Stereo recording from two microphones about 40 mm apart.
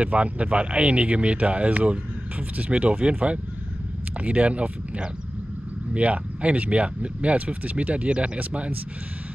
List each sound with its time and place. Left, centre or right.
0.0 s speech: right